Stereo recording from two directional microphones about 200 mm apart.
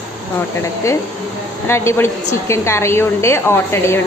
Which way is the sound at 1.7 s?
15° left (ahead or behind).